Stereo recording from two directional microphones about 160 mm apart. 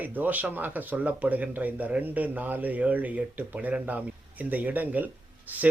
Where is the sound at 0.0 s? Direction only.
10° right (ahead or behind).